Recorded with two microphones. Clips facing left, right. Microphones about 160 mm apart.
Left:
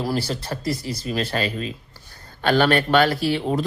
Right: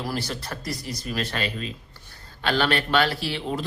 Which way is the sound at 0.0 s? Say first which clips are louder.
Left 5 dB; 30° left (ahead or behind).